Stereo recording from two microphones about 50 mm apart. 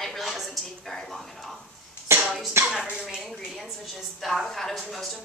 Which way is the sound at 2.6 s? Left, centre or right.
Right.